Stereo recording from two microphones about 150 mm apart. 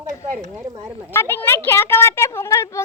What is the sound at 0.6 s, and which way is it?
Speech, 25° right (ahead or behind).